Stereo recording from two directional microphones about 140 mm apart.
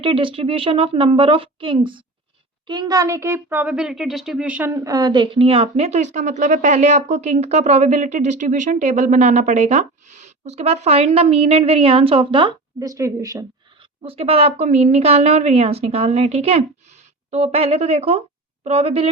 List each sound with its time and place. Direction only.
0.0 s a woman's voice: 40° right (ahead or behind); by 4.7 s 10° right (ahead or behind)
4.8 s speech: 25° right (ahead or behind)
12.8 s speech: 25° right (ahead or behind)
14.0 s speech: 45° right (ahead or behind)